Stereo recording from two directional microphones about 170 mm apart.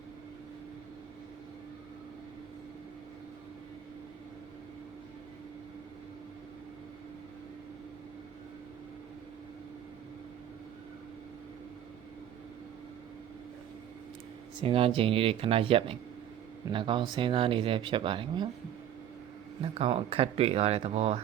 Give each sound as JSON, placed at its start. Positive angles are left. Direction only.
{"t": 14.6, "sound": "speech", "side_deg": -30}
{"t": 19.6, "sound": "speech", "side_deg": -35}